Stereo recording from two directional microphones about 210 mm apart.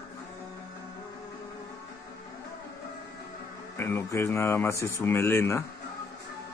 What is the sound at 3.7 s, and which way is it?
Speech, 10° left (ahead or behind).